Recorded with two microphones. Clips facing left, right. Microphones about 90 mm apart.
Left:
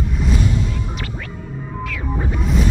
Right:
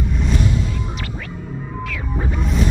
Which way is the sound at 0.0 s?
Centre (ahead or behind).